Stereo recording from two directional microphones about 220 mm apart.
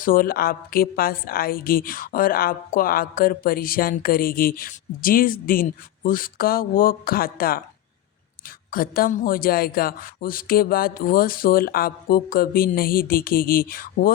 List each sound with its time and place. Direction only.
0.0 s a woman's voice: 40° left (ahead or behind)
8.7 s a woman's voice: 40° left (ahead or behind)